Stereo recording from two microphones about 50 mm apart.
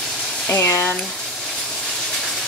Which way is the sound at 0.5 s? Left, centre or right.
Left.